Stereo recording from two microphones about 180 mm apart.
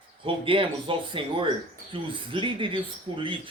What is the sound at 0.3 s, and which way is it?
Speech, 30° right (ahead or behind).